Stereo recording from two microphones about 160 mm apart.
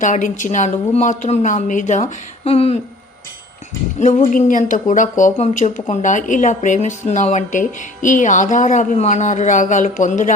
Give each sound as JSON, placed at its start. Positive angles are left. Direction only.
{"t": 0.0, "sound": "speech", "side_deg": 55}
{"t": 3.9, "sound": "speech", "side_deg": 50}